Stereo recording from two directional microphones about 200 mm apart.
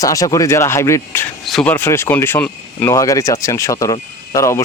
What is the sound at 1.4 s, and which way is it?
Speech, centre (ahead or behind).